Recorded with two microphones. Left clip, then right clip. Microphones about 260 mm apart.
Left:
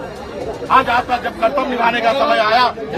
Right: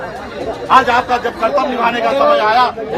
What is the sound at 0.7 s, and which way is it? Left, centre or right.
A man's voice, right.